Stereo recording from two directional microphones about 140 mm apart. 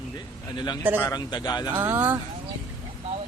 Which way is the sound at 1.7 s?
15° right (ahead or behind).